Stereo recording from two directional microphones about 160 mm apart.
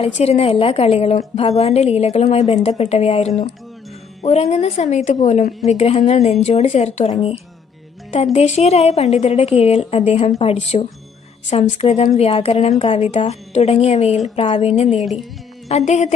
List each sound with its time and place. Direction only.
0.0 s a woman's voice: 40° left (ahead or behind)
14.9 s speech: centre (ahead or behind)
15.9 s a woman's voice: 45° left (ahead or behind)